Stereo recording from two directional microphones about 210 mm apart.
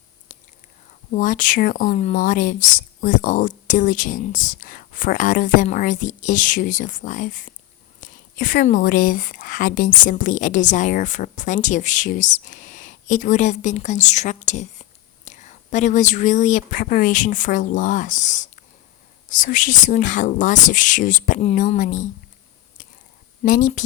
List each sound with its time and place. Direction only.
0.3 s whispering: 35° left (ahead or behind)
1.1 s speech: 40° left (ahead or behind)
23.4 s speech: 40° left (ahead or behind)